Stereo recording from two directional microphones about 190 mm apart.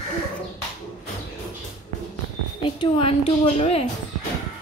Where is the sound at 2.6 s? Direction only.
25° left (ahead or behind).